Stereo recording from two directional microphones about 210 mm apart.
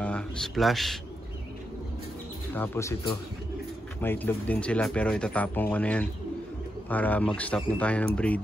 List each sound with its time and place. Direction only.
0.0 s speech: 5° left (ahead or behind)
2.5 s speech: 10° left (ahead or behind)
4.0 s speech: 10° left (ahead or behind)